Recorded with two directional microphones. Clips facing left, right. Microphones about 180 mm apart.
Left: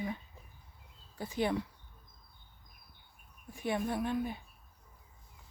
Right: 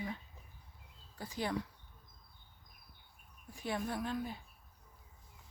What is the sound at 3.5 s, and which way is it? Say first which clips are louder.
Speech: left 4 dB; 20° left (ahead or behind).